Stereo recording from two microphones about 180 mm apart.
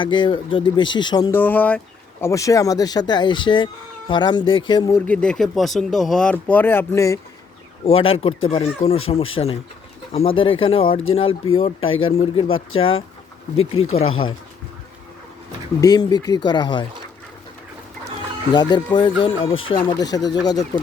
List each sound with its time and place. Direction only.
0.0 s speech: 25° left (ahead or behind)
1.4 s speech: 10° left (ahead or behind); by 4.9 s 25° left (ahead or behind)
4.9 s speech: 5° left (ahead or behind)
7.9 s speech: 30° left (ahead or behind)
11.8 s speech: 90° left
12.1 s speech: 30° left (ahead or behind)
14.1 s speech: 30° left (ahead or behind)
15.8 s speech: 20° left (ahead or behind)
18.5 s speech: 25° left (ahead or behind)